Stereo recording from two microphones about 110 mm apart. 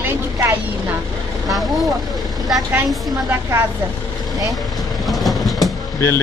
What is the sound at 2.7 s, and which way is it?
Speech, 20° right (ahead or behind).